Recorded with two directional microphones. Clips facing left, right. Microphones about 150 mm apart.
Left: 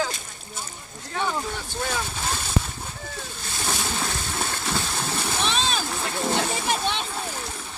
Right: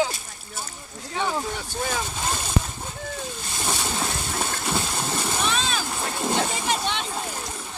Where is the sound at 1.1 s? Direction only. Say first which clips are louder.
Right 1 dB; 10° right (ahead or behind).